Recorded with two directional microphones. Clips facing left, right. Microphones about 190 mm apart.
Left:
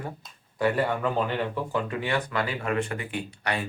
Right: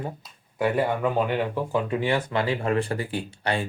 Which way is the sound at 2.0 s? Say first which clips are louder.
Right 3 dB; 30° right (ahead or behind).